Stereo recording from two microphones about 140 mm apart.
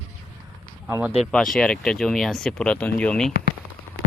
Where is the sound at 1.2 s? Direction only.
5° left (ahead or behind).